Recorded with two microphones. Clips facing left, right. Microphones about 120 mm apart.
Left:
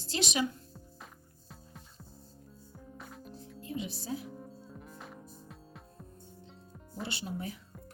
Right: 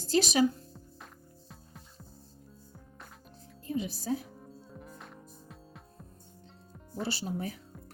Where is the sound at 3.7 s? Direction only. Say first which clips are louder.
Right 5 dB; 40° right (ahead or behind).